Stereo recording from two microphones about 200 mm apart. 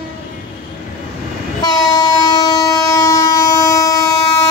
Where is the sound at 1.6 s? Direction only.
20° left (ahead or behind).